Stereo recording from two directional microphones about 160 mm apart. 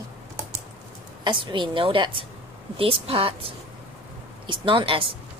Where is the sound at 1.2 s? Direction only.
30° right (ahead or behind).